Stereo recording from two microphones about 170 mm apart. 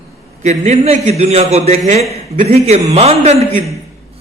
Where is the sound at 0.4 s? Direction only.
45° right (ahead or behind).